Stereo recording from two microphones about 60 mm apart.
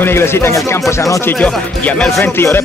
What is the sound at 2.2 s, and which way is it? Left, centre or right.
Speech, left.